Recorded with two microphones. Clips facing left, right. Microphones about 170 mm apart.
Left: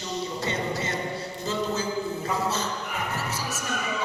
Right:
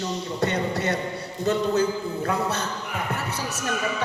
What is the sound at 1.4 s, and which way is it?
A man's voice, 65° right (ahead or behind).